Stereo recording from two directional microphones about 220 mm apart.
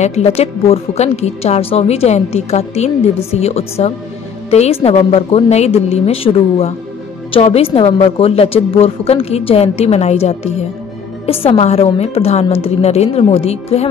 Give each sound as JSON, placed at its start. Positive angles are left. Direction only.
{"t": 0.0, "sound": "a woman's voice", "side_deg": 30}